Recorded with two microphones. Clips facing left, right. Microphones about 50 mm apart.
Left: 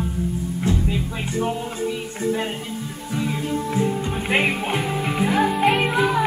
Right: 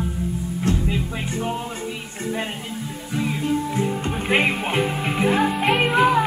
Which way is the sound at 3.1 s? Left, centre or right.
Centre.